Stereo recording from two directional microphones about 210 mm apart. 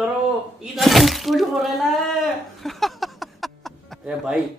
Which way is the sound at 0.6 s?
Centre (ahead or behind).